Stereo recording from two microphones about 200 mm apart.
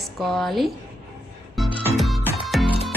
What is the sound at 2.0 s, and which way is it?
Music, centre (ahead or behind).